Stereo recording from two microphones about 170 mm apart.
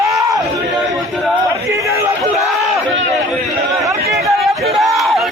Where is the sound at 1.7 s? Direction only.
20° right (ahead or behind).